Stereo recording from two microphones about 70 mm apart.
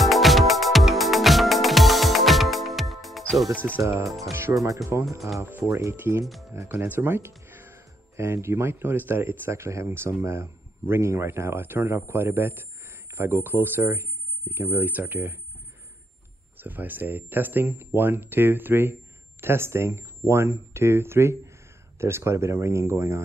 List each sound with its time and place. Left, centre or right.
0.0 s music: centre
4.3 s speech: right
6.2 s speech: centre
6.5 s speech: right
16.5 s speech: right